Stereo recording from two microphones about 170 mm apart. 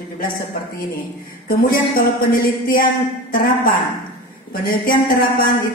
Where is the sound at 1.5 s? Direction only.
55° left (ahead or behind).